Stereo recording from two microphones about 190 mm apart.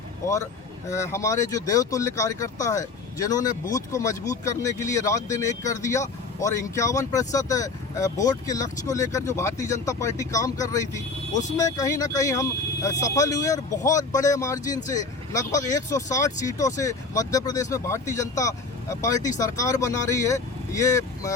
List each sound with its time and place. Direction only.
0.9 s speech: 15° left (ahead or behind)